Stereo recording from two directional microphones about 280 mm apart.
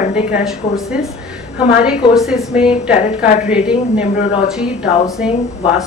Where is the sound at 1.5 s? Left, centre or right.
Centre.